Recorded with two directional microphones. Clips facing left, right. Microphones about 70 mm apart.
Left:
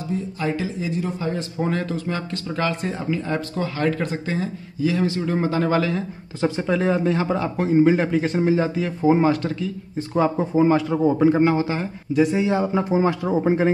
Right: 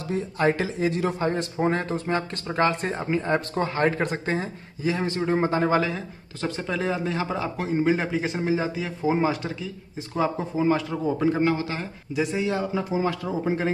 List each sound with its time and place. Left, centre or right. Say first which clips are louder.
0.1 s speech: right 2 dB; right
1.2 s speech: right 1 dB; right
1.6 s speech: even; right
6.4 s speech: left 6 dB; centre
10.1 s speech: left 6 dB; centre
11.1 s a man's voice: left 5 dB; centre
12.1 s speech: left 7 dB; centre
12.4 s speech: left 5 dB; centre
13.2 s speech: left 7 dB; left